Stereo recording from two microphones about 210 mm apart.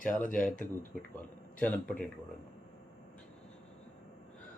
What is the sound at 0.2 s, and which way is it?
Speech, 40° left (ahead or behind).